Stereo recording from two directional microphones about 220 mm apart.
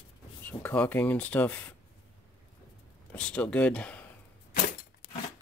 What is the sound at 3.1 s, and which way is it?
Speech, 5° left (ahead or behind).